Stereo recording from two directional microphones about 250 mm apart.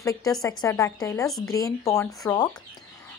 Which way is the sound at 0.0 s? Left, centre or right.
Centre.